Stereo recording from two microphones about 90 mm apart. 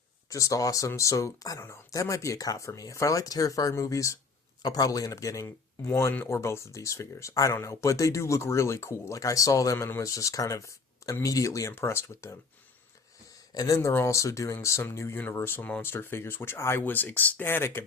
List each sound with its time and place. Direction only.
0.3 s speech: 40° left (ahead or behind)
13.5 s speech: 40° left (ahead or behind)